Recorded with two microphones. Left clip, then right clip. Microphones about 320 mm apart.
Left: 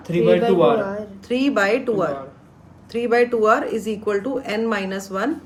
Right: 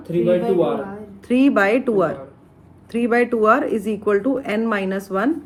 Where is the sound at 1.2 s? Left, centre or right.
Centre.